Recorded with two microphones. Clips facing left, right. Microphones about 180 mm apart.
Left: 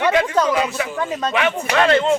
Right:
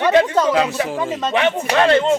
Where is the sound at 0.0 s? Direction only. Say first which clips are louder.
Right 2 dB; 30° right (ahead or behind).